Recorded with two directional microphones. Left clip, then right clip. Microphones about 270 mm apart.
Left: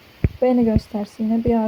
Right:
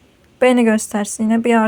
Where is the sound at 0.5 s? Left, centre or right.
Right.